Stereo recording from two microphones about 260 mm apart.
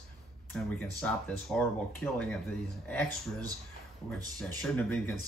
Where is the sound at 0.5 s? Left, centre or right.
Centre.